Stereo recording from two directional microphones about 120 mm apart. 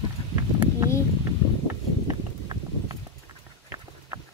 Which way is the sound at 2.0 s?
35° right (ahead or behind).